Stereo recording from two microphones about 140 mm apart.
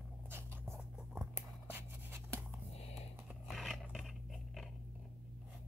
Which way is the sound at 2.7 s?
45° left (ahead or behind).